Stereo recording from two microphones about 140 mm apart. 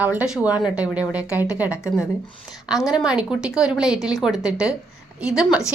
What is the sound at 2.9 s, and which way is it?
A woman's voice, 5° right (ahead or behind).